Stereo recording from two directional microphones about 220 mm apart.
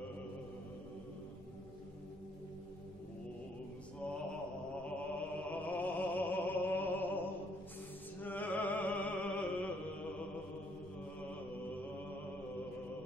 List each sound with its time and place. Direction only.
4.8 s music: 5° left (ahead or behind)
8.2 s music: 10° left (ahead or behind)